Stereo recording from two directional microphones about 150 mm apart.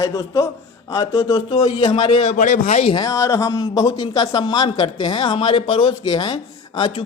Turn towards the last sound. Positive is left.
turn(degrees=35)  # may be behind; listen again after turning